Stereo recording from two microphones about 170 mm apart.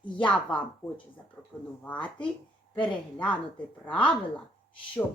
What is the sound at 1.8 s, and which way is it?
Speech, 10° left (ahead or behind).